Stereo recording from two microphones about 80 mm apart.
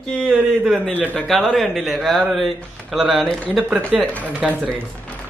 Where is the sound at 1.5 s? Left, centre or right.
Centre.